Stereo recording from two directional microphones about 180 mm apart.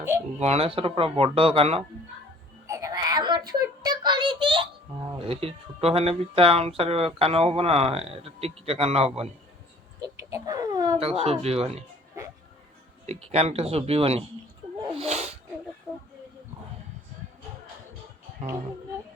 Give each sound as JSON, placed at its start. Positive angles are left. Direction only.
{"t": 0.3, "sound": "speech", "side_deg": -35}
{"t": 2.6, "sound": "child singing", "side_deg": -15}
{"t": 5.2, "sound": "speech", "side_deg": -35}
{"t": 10.3, "sound": "speech", "side_deg": -20}
{"t": 11.0, "sound": "speech", "side_deg": -35}
{"t": 13.1, "sound": "speech", "side_deg": -35}